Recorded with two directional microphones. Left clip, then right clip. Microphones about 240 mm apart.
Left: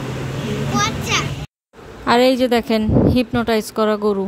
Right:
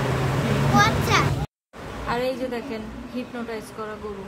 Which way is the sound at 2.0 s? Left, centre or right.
Left.